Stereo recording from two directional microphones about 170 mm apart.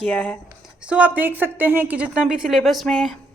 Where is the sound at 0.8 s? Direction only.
5° right (ahead or behind).